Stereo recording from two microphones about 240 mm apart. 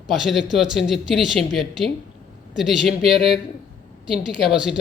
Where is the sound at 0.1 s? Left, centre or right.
Centre.